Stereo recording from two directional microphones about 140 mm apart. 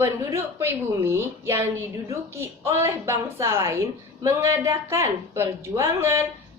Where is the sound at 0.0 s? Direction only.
20° right (ahead or behind).